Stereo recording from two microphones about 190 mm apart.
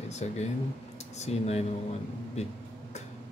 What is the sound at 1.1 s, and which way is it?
Speech, 35° left (ahead or behind).